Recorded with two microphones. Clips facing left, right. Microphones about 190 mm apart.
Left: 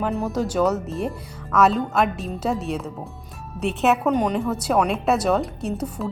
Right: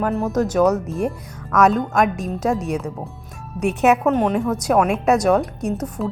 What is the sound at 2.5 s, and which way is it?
Speech, 45° right (ahead or behind).